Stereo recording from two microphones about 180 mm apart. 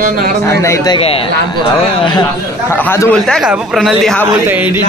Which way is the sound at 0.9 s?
30° left (ahead or behind).